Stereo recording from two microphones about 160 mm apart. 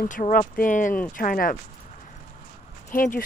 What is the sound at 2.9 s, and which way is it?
Speech, 60° left (ahead or behind).